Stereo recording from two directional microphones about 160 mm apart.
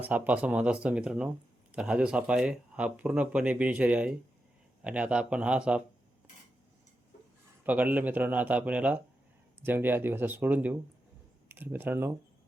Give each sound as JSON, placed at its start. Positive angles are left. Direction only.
{"t": 0.0, "sound": "speech", "side_deg": -10}
{"t": 7.6, "sound": "speech", "side_deg": -10}